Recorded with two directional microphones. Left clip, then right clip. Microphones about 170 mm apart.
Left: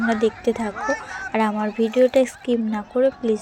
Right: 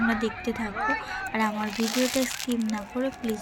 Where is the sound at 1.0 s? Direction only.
5° left (ahead or behind).